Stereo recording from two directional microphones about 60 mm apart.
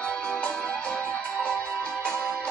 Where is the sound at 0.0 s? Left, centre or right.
Centre.